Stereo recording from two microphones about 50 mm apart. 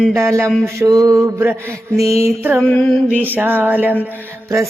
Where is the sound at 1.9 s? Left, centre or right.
Right.